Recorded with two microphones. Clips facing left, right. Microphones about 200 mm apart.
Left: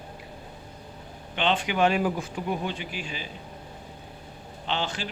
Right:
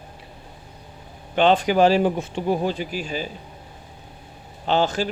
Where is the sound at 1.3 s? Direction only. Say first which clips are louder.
Right 9 dB; 40° right (ahead or behind).